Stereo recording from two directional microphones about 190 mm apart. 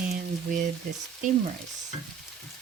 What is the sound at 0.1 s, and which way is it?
Frying, 45° right (ahead or behind).